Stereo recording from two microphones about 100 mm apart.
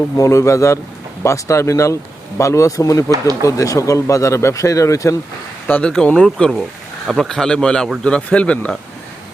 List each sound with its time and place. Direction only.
0.2 s speech: 30° left (ahead or behind)
5.6 s a man's voice: 15° left (ahead or behind)